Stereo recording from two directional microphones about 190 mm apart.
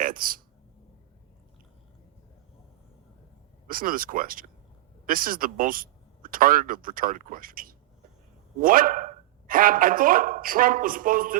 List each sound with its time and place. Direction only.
0.0 s speech: 45° right (ahead or behind)
3.7 s speech: 50° right (ahead or behind)